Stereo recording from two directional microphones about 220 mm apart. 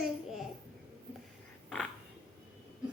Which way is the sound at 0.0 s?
Centre (ahead or behind).